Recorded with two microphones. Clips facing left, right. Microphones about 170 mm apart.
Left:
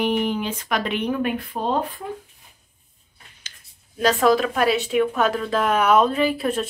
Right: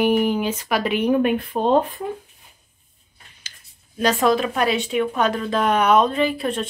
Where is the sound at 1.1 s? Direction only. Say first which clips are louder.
Right 5 dB; 20° right (ahead or behind).